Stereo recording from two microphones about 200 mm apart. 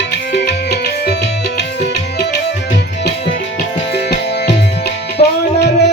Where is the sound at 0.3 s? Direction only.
60° left (ahead or behind).